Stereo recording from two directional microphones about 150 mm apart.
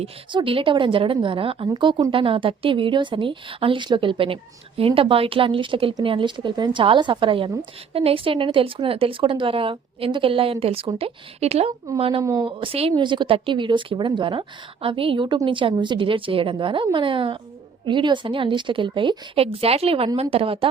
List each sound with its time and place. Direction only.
0.0 s a woman's voice: 35° right (ahead or behind)
12.2 s speech: 20° right (ahead or behind)
12.5 s a woman's voice: 35° right (ahead or behind)